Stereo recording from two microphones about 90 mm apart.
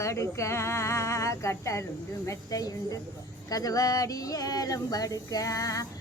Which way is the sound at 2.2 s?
40° left (ahead or behind).